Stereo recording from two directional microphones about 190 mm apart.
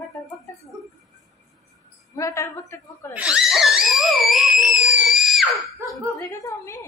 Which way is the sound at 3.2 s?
5° right (ahead or behind).